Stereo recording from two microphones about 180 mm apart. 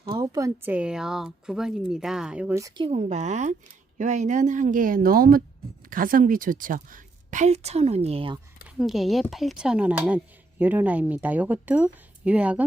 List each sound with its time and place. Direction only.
0.0 s speech: 25° right (ahead or behind); by 2.6 s 5° right (ahead or behind)
2.6 s speech: 20° right (ahead or behind)
2.8 s a woman's voice: 35° right (ahead or behind)
8.8 s speech: centre (ahead or behind)